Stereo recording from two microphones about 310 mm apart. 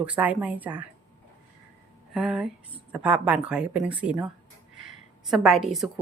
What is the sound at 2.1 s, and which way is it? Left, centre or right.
A woman's voice, centre.